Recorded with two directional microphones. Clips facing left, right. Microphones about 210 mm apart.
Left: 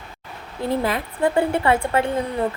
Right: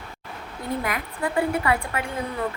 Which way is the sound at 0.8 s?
30° left (ahead or behind).